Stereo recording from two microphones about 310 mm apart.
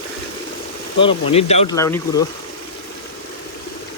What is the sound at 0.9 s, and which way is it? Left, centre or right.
Speech, centre.